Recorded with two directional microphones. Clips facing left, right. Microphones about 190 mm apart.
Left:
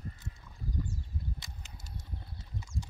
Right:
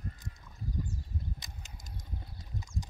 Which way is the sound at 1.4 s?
20° right (ahead or behind).